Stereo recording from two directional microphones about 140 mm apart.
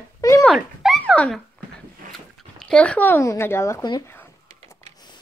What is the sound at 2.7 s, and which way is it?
Speech, 10° left (ahead or behind).